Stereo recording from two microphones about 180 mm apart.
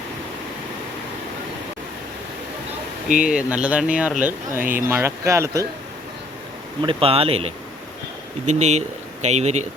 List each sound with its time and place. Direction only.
3.3 s speech: 5° right (ahead or behind)
6.8 s speech: 30° right (ahead or behind)